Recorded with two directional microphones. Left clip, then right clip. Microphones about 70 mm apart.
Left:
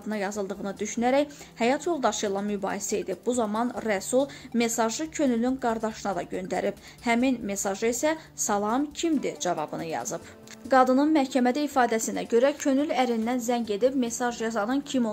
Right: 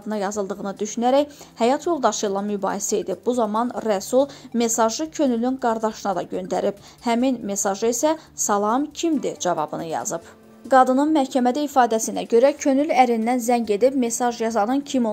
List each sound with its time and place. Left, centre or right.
0.1 s speech: right
3.8 s speech: right
10.7 s speech: right
13.9 s a woman's voice: right